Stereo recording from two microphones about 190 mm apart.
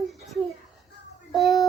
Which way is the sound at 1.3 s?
Centre (ahead or behind).